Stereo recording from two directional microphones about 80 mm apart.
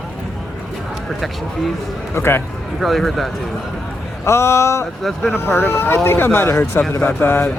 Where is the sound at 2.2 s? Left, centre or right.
Left.